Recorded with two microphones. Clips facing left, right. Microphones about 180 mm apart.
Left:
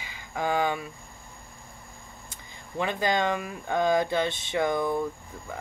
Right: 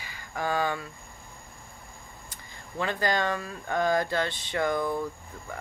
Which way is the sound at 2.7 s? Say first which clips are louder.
Left 1 dB; 20° left (ahead or behind).